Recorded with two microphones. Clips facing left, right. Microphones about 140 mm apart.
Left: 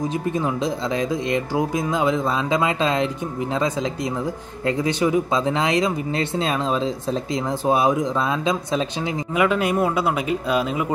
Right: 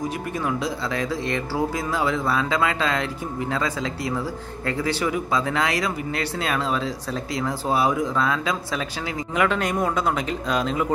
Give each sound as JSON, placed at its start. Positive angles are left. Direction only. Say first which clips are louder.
{"t": 0.3, "sound": "speech", "louder": "left 3 dB", "side_deg": 20}
{"t": 9.3, "sound": "speech", "louder": "left 3 dB", "side_deg": 5}